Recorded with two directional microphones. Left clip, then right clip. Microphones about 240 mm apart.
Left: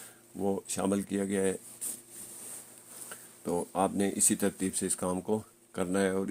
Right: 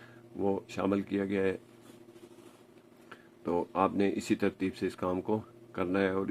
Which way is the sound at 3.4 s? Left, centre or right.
Left.